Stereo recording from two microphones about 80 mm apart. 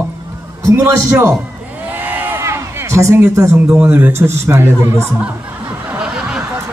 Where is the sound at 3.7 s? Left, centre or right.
Right.